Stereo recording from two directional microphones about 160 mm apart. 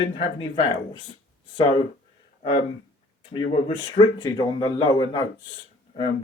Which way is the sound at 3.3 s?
30° left (ahead or behind).